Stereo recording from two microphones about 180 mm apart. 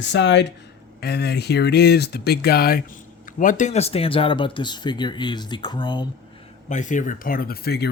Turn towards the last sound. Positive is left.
turn(degrees=60)  # may be behind; listen again after turning